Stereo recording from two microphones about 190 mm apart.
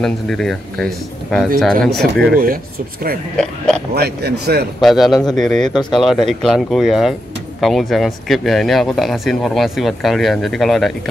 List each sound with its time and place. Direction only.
0.0 s speech: centre (ahead or behind)
2.3 s speech: 50° right (ahead or behind)
3.3 s speech: 5° left (ahead or behind)
3.9 s speech: 60° right (ahead or behind)
4.8 s speech: centre (ahead or behind)